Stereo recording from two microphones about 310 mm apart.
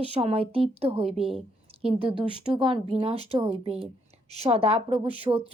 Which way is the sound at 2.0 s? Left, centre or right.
Centre.